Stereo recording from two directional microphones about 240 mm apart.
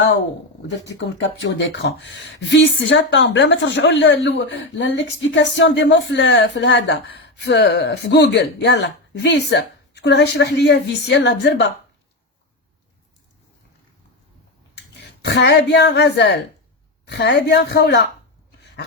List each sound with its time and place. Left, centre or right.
0.9 s speech: left
14.9 s a woman's voice: left